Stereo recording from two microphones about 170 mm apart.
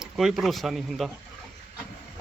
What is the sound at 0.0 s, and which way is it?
Speech, centre (ahead or behind).